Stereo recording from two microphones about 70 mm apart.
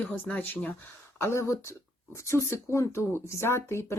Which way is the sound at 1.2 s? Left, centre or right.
Left.